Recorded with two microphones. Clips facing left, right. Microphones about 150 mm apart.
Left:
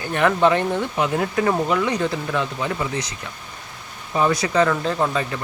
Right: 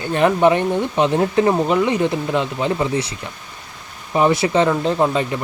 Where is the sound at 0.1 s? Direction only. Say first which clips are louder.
Right 3 dB; 20° right (ahead or behind).